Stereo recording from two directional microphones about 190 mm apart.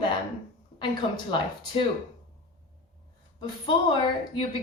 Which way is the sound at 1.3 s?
25° left (ahead or behind).